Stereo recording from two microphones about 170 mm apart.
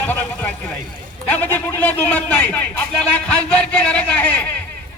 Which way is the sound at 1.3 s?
10° left (ahead or behind).